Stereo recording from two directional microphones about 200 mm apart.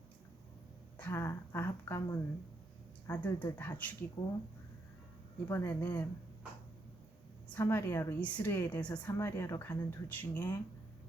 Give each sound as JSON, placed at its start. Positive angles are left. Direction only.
{"t": 0.9, "sound": "speech", "side_deg": 10}
{"t": 5.5, "sound": "speech", "side_deg": 10}
{"t": 7.5, "sound": "speech", "side_deg": 10}